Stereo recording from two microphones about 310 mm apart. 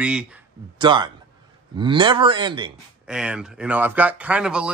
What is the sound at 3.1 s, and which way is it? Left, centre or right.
Speech, centre.